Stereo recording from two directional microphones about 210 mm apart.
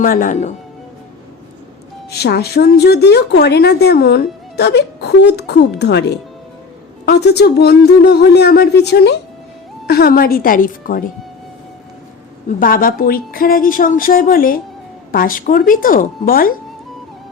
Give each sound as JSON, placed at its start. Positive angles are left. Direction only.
{"t": 0.0, "sound": "speech", "side_deg": 40}
{"t": 2.0, "sound": "a woman's voice", "side_deg": 50}
{"t": 12.5, "sound": "a woman's voice", "side_deg": 40}